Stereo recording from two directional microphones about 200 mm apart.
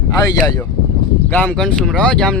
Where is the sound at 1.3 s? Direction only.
5° left (ahead or behind).